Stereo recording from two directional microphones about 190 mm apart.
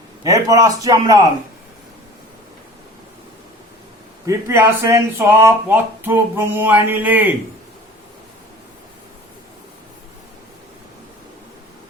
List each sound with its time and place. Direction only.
0.3 s speech: 15° right (ahead or behind)
4.3 s speech: 15° right (ahead or behind)